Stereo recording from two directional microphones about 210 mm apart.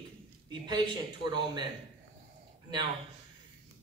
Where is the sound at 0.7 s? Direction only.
20° right (ahead or behind).